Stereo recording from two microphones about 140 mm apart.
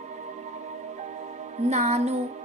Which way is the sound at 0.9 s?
60° right (ahead or behind).